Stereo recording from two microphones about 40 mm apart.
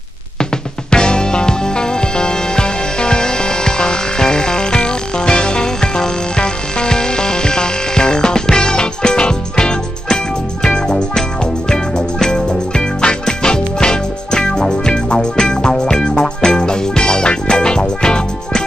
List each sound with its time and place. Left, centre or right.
0.4 s music: left